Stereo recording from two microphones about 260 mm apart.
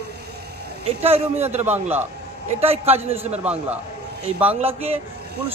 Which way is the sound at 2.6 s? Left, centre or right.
Right.